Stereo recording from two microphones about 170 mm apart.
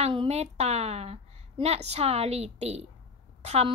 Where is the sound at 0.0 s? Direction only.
35° right (ahead or behind).